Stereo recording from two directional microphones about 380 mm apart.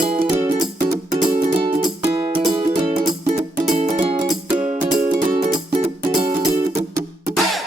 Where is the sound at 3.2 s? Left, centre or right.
Centre.